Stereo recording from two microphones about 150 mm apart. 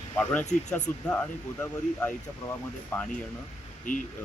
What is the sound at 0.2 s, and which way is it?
Speech, 10° left (ahead or behind).